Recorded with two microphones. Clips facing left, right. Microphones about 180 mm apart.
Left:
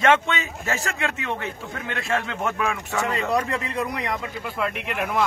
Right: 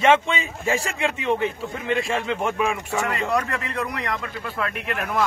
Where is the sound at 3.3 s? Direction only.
20° left (ahead or behind).